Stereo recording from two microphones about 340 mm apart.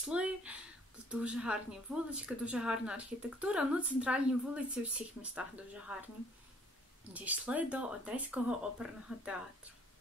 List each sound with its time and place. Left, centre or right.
0.1 s a woman's voice: centre
7.2 s a woman's voice: centre